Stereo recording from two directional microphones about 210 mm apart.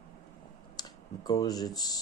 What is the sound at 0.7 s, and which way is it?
Speech, 20° left (ahead or behind).